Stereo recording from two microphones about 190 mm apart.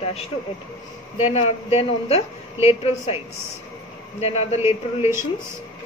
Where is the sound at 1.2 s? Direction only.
35° left (ahead or behind).